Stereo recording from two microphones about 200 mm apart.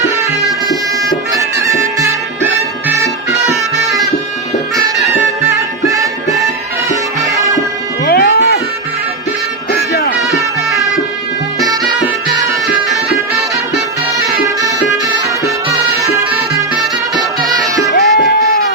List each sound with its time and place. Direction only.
1.6 s music: 15° right (ahead or behind)
3.5 s music: centre (ahead or behind)
5.8 s music: 15° right (ahead or behind)
8.0 s music: 50° left (ahead or behind)
9.7 s music: 50° left (ahead or behind)
16.0 s music: 15° right (ahead or behind)
17.9 s music: 55° left (ahead or behind)